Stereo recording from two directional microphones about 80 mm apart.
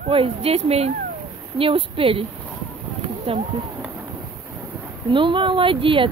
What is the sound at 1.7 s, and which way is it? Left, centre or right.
Speech, right.